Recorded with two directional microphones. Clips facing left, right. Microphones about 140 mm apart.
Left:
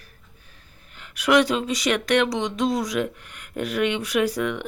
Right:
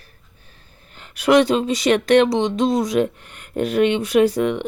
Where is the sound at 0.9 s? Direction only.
30° right (ahead or behind).